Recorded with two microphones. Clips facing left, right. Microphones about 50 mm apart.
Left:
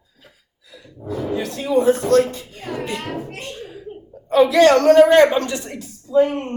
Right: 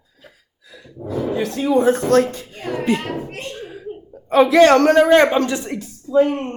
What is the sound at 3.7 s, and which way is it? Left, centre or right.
A woman's voice, right.